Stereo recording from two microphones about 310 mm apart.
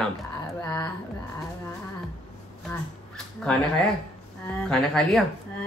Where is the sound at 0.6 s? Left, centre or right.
Centre.